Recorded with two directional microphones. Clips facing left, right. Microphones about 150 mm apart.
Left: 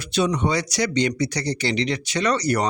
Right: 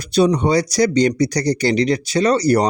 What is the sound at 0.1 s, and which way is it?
Speech, 35° right (ahead or behind).